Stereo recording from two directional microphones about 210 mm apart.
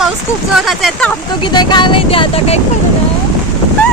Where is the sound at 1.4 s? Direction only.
20° left (ahead or behind).